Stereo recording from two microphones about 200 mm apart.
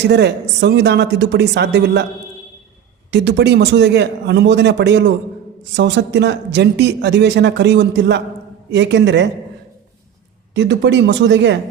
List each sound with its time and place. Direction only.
0.1 s speech: 55° right (ahead or behind)
3.1 s speech: 55° right (ahead or behind)
10.5 s speech: 65° right (ahead or behind)